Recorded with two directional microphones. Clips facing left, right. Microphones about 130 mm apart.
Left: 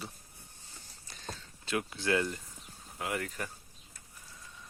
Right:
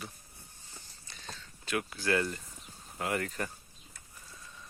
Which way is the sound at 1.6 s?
25° left (ahead or behind).